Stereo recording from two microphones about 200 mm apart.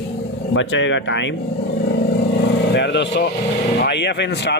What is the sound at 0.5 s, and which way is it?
Speech, 70° left (ahead or behind).